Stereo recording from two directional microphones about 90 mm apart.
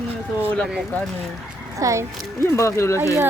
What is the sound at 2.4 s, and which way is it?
Speech, 35° left (ahead or behind).